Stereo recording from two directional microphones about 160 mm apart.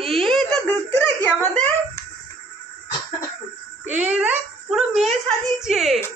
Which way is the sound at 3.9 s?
10° right (ahead or behind).